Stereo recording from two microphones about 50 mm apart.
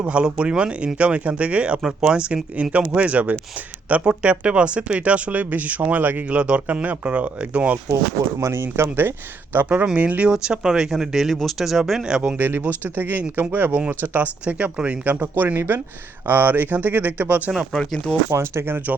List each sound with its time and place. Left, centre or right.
0.0 s speech: right
1.8 s speech: centre
8.5 s speech: right
9.8 s speech: right
12.4 s speech: right
14.4 s speech: right
15.1 s speech: right
15.5 s speech: right
16.2 s speech: right
17.7 s speech: centre
18.3 s speech: right